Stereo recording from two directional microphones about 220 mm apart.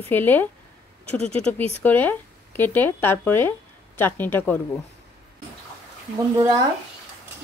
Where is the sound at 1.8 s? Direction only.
10° left (ahead or behind).